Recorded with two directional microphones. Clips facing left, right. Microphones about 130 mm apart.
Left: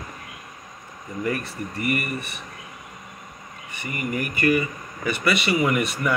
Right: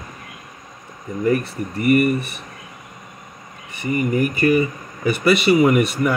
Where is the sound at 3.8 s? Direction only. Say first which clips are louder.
Right 9 dB; 30° right (ahead or behind).